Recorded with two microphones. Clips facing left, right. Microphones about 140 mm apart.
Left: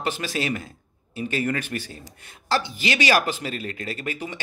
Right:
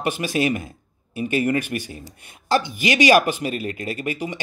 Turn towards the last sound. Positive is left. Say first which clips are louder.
# right 4 dB
turn(degrees=-15)  # may be behind; listen again after turning